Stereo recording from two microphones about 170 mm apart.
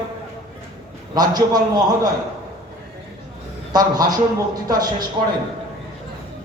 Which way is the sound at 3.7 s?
20° right (ahead or behind).